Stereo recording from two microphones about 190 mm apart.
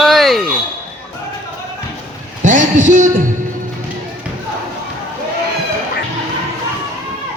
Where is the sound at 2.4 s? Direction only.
40° right (ahead or behind).